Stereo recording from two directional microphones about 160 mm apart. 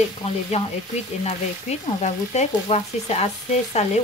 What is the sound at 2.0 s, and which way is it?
Frying, 40° left (ahead or behind).